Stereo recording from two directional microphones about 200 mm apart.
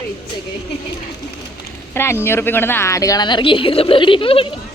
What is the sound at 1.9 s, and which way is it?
A woman's voice, 10° left (ahead or behind).